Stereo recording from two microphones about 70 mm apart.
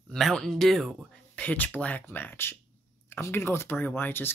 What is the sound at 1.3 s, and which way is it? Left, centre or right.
Speech, centre.